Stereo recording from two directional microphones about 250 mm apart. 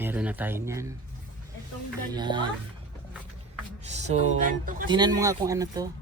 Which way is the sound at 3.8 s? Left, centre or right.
Right.